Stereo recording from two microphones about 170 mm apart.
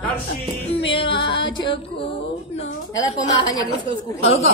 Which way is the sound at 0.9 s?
30° left (ahead or behind).